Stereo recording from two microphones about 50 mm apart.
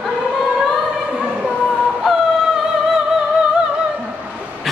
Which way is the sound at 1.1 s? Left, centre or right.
Right.